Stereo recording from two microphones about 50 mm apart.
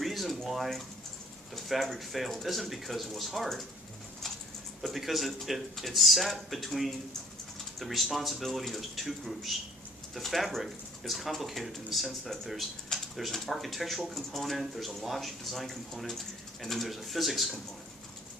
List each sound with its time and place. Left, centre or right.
0.0 s a sound: centre
1.5 s speech: centre
4.8 s speech: centre